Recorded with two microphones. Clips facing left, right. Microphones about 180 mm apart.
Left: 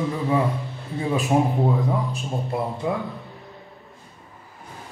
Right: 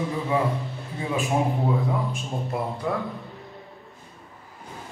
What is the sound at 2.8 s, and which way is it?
Speech, 20° left (ahead or behind).